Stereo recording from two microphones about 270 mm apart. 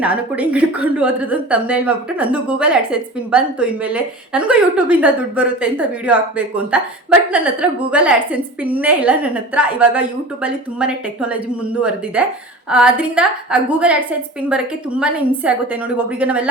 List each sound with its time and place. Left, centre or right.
0.0 s a woman's voice: centre